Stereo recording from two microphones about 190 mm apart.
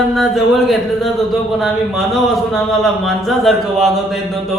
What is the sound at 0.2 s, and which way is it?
Speech, centre (ahead or behind).